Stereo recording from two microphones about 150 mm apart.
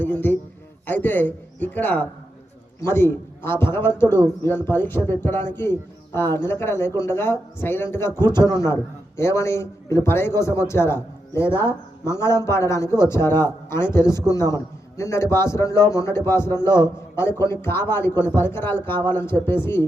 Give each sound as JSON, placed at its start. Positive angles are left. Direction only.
{"t": 0.0, "sound": "a man's voice", "side_deg": 15}
{"t": 16.6, "sound": "a man's voice", "side_deg": -30}
{"t": 17.2, "sound": "a man's voice", "side_deg": 15}